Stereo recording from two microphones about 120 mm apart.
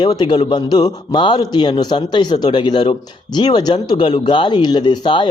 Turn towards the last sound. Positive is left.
turn(degrees=40)  # may be behind; listen again after turning